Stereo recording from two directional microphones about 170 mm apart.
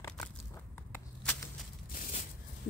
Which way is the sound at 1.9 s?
45° left (ahead or behind).